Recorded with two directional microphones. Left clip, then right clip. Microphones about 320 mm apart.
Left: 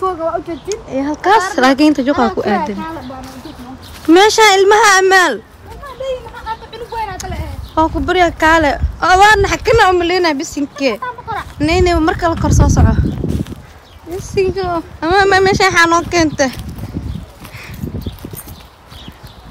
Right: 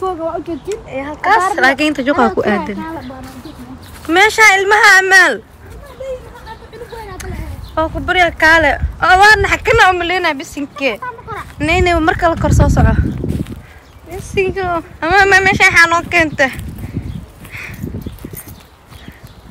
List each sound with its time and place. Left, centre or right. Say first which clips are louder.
0.0 s speech: left 2 dB; centre
1.6 s speech: left 1 dB; centre
4.1 s speech: left 1 dB; centre
7.7 s speech: left 1 dB; centre
17.6 s horse: right 6 dB; centre